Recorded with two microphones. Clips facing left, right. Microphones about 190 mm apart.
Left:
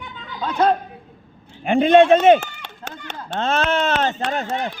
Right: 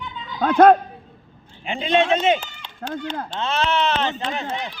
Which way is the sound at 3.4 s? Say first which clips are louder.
Left 3 dB; 50° left (ahead or behind).